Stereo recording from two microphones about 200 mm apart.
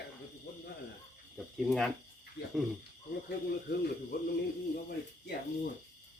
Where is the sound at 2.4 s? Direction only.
60° left (ahead or behind).